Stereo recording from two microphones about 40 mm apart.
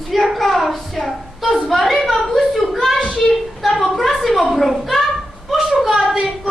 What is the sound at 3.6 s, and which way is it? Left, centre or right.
A woman's voice, centre.